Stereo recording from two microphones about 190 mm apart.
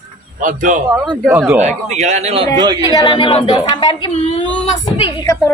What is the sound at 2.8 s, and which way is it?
A woman's voice, 20° left (ahead or behind).